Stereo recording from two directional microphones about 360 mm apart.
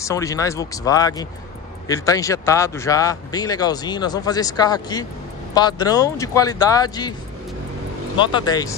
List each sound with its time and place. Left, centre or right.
0.0 s speech: centre
8.2 s speech: centre